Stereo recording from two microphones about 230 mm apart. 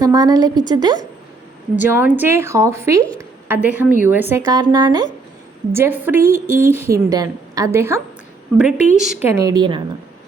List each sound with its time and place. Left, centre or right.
0.0 s a woman's voice: centre
6.2 s speech: right
6.6 s a woman's voice: centre
9.3 s a woman's voice: centre